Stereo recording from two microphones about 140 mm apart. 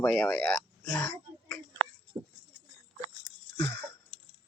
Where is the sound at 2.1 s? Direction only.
25° right (ahead or behind).